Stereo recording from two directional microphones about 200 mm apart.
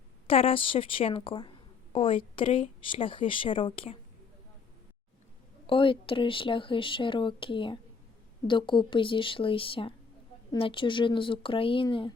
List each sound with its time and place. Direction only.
0.3 s a woman's voice: 30° left (ahead or behind)
5.6 s a woman's voice: 25° left (ahead or behind)